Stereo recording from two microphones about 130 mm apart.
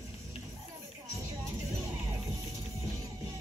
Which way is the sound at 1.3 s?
25° right (ahead or behind).